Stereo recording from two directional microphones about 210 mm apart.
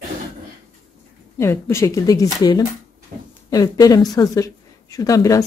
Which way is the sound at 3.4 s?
15° left (ahead or behind).